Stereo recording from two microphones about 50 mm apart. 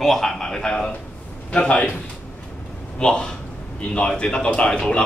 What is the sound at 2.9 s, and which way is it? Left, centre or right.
A man's voice, centre.